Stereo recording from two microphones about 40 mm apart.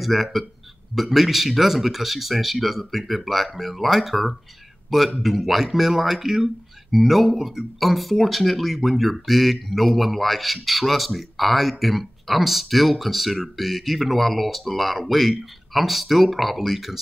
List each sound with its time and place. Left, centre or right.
0.0 s speech: centre